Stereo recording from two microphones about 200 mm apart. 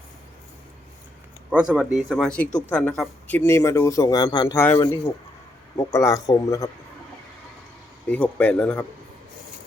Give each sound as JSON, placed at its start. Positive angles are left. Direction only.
{"t": 1.5, "sound": "speech", "side_deg": -5}
{"t": 8.1, "sound": "speech", "side_deg": 5}